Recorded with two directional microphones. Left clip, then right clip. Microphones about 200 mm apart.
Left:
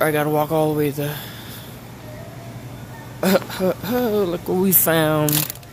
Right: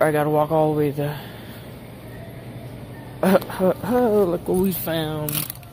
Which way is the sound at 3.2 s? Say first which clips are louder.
Even; 5° left (ahead or behind).